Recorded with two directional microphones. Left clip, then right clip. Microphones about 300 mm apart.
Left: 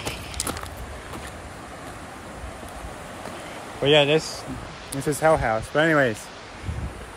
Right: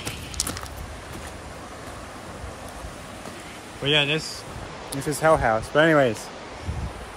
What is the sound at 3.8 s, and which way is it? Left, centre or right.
Speech, centre.